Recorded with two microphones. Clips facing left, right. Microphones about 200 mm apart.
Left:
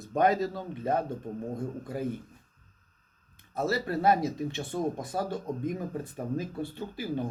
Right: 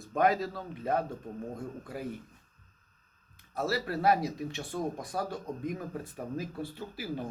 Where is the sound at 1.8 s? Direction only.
Centre (ahead or behind).